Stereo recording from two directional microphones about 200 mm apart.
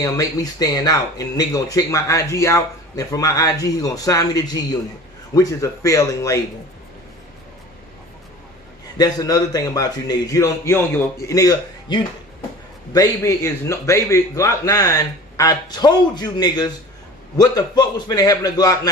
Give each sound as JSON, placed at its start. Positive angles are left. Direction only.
{"t": 0.0, "sound": "speech", "side_deg": 20}
{"t": 8.9, "sound": "a man's voice", "side_deg": 20}